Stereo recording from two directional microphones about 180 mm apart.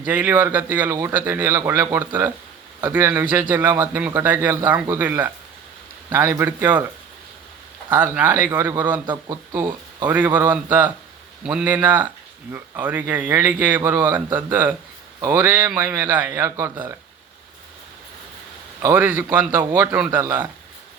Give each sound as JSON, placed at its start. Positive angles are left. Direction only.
{"t": 0.0, "sound": "speech", "side_deg": -10}
{"t": 7.9, "sound": "speech", "side_deg": -10}
{"t": 9.0, "sound": "speech", "side_deg": -25}
{"t": 10.1, "sound": "speech", "side_deg": -10}
{"t": 18.8, "sound": "speech", "side_deg": -10}